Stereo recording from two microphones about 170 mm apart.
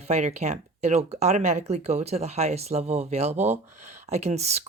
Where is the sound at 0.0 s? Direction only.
40° right (ahead or behind).